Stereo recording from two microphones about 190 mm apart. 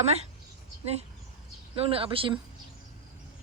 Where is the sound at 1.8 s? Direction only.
30° right (ahead or behind).